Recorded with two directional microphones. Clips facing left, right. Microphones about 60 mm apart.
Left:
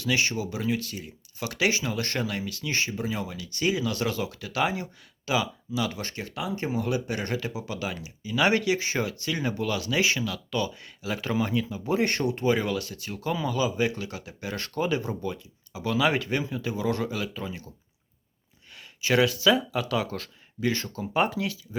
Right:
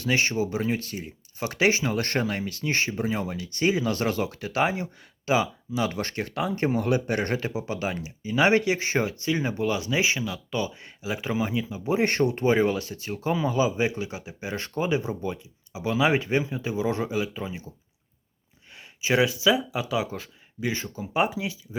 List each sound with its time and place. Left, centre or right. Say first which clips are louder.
0.0 s speech: right 2 dB; right; by 17.7 s centre
18.7 s speech: even; right